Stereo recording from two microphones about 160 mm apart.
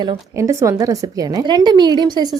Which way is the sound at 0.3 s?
20° right (ahead or behind).